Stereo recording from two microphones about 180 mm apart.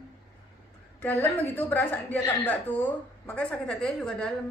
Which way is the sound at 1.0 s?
10° left (ahead or behind).